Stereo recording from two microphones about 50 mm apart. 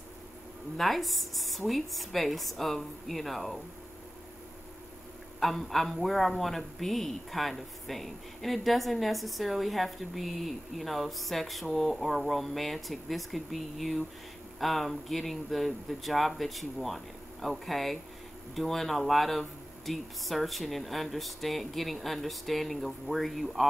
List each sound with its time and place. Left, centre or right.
0.7 s a man's voice: centre
5.4 s a man's voice: centre